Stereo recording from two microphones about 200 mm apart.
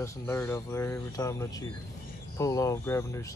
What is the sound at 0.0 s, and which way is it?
Speech, 15° left (ahead or behind).